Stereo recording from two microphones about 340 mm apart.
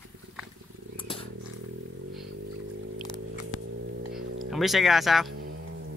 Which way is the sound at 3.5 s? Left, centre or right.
Left.